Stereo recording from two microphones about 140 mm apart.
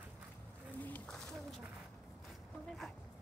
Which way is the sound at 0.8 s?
10° left (ahead or behind).